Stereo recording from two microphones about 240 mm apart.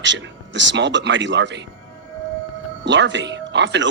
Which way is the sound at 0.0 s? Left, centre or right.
Right.